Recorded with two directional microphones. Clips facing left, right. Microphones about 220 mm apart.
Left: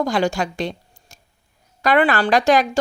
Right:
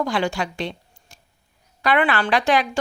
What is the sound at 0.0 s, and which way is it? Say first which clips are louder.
A woman's voice: left 3 dB; 40° left (ahead or behind).